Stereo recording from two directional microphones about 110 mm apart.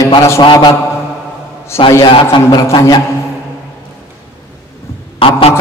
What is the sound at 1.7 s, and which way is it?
Speech, 25° left (ahead or behind).